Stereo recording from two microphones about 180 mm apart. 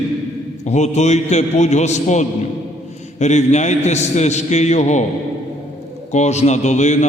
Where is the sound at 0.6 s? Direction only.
40° left (ahead or behind).